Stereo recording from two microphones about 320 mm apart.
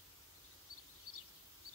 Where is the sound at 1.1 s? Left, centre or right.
Left.